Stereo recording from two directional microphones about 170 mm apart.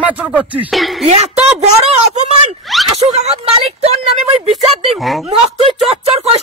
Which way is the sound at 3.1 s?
35° right (ahead or behind).